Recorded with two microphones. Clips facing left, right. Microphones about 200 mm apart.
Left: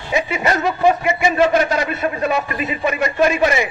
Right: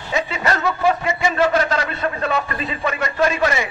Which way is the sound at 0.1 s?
15° left (ahead or behind).